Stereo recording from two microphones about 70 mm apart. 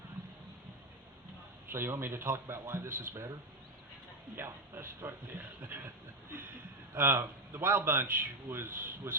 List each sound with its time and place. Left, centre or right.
1.7 s a man's voice: right
4.4 s a man's voice: right
5.6 s a sound: right
6.9 s a man's voice: right